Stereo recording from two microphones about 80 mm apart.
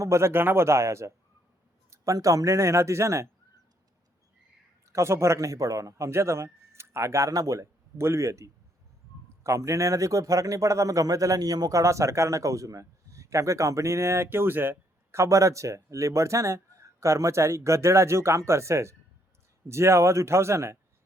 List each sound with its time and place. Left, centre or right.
0.0 s speech: right
4.9 s speech: right